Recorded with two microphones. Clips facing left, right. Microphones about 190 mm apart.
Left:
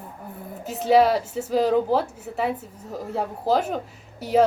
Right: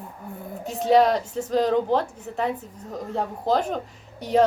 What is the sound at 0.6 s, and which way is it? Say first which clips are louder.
A woman's voice: even; 5° left (ahead or behind).